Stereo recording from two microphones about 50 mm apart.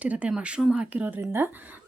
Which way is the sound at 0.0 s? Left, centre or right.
Right.